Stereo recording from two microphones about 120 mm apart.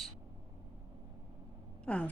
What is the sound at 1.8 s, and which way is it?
Speech, 10° left (ahead or behind).